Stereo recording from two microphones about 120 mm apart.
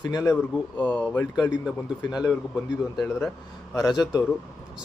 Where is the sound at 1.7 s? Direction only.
5° right (ahead or behind).